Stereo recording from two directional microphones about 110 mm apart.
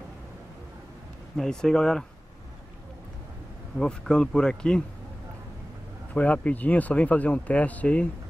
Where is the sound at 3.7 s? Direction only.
5° left (ahead or behind).